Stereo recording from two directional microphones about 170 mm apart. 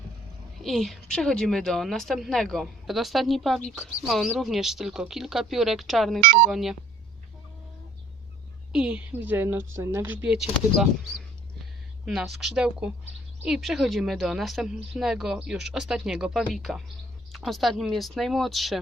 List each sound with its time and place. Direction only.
0.6 s a woman's voice: centre (ahead or behind)
6.1 s speech: 55° right (ahead or behind)
6.5 s a woman's voice: centre (ahead or behind)
8.7 s a woman's voice: 5° right (ahead or behind)
12.0 s a woman's voice: centre (ahead or behind)